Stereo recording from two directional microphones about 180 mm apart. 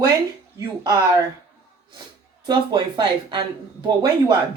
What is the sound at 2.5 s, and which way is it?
A woman's voice, 25° right (ahead or behind).